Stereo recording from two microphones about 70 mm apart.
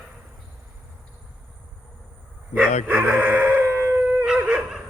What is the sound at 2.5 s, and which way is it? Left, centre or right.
Chicken, right.